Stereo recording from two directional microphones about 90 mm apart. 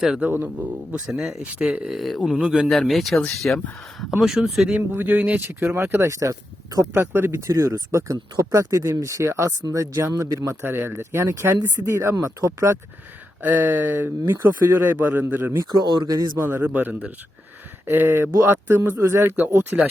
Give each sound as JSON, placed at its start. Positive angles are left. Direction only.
{"t": 0.2, "sound": "speech", "side_deg": -20}
{"t": 1.0, "sound": "speech", "side_deg": -5}
{"t": 2.4, "sound": "speech", "side_deg": -10}
{"t": 2.6, "sound": "speech", "side_deg": 0}
{"t": 3.4, "sound": "speech", "side_deg": 15}
{"t": 4.2, "sound": "speech", "side_deg": -5}
{"t": 4.9, "sound": "speech", "side_deg": -20}
{"t": 6.9, "sound": "speech", "side_deg": -25}
{"t": 10.6, "sound": "speech", "side_deg": -25}
{"t": 13.4, "sound": "speech", "side_deg": -20}
{"t": 15.5, "sound": "speech", "side_deg": -50}
{"t": 16.5, "sound": "speech", "side_deg": -20}
{"t": 19.4, "sound": "speech", "side_deg": -20}